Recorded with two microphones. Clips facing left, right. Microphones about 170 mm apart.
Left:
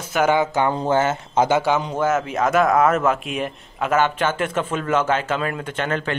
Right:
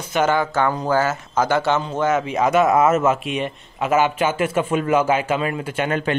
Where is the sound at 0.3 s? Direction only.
15° left (ahead or behind).